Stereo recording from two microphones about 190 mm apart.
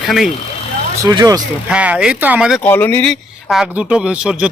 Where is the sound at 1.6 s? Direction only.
5° right (ahead or behind).